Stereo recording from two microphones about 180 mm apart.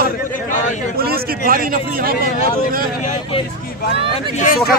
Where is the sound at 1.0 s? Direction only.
55° right (ahead or behind).